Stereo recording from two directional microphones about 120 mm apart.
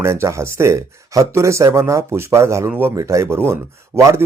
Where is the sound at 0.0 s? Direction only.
20° right (ahead or behind).